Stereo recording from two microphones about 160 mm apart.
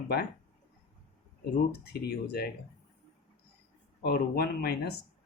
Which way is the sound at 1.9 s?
80° left.